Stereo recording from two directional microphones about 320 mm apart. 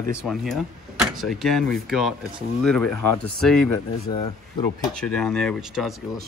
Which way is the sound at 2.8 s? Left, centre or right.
Left.